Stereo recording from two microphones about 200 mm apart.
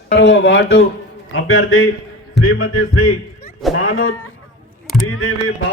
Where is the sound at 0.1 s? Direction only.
60° left (ahead or behind).